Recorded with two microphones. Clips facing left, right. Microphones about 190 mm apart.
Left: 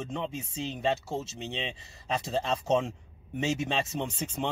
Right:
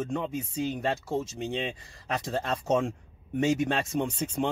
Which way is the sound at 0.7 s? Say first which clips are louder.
Left 2 dB; 10° right (ahead or behind).